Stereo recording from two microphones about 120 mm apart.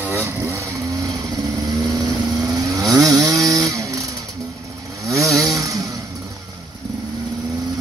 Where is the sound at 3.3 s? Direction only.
30° right (ahead or behind).